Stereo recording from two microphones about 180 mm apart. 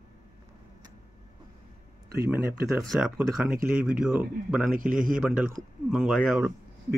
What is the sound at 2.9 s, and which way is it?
Speech, 5° right (ahead or behind).